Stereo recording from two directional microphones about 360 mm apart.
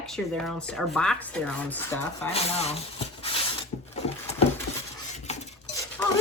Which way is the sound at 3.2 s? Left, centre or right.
Centre.